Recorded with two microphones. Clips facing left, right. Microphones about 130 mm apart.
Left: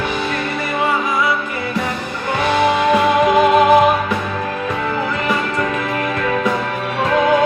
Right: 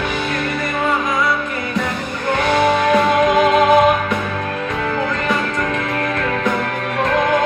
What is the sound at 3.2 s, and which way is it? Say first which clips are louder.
Music: left 1 dB; 5° left (ahead or behind).